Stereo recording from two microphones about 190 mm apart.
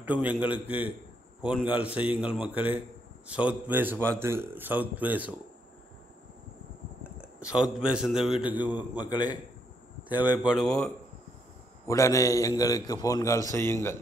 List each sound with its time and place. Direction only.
0.0 s speech: 5° right (ahead or behind)
7.2 s a man's voice: 5° right (ahead or behind)
9.1 s a man's voice: 20° left (ahead or behind)
10.2 s a man's voice: 5° right (ahead or behind)
11.9 s a man's voice: 15° left (ahead or behind)